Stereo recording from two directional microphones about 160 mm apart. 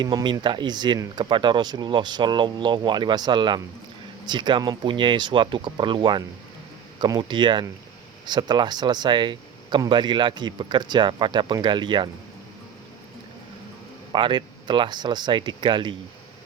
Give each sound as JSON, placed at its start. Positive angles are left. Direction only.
{"t": 0.0, "sound": "speech", "side_deg": -25}
{"t": 14.1, "sound": "speech", "side_deg": -30}